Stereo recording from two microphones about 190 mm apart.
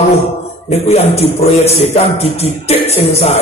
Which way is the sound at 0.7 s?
35° left (ahead or behind).